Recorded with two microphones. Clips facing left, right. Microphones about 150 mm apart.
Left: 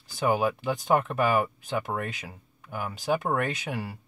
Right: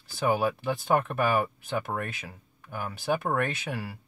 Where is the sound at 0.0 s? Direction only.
20° left (ahead or behind).